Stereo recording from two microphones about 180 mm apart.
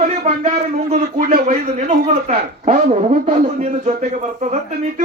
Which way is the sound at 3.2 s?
35° right (ahead or behind).